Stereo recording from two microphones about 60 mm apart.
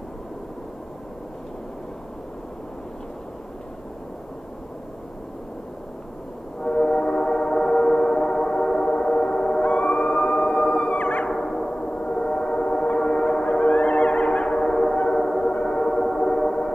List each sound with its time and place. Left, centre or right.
6.6 s train: centre
9.7 s howl: left
11.2 s gong: centre